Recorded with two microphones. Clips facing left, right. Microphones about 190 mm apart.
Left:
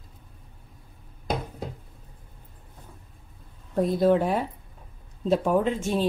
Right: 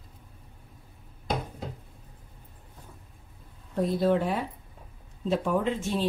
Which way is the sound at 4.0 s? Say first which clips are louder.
Left 4 dB; 45° left (ahead or behind).